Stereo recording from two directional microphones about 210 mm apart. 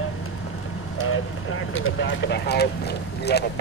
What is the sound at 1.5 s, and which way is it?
Speech, 65° left (ahead or behind).